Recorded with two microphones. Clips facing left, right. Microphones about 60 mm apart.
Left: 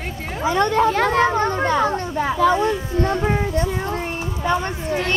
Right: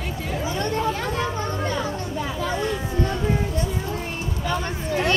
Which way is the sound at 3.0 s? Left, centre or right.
Left.